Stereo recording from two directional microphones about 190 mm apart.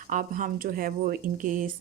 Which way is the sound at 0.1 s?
45° right (ahead or behind).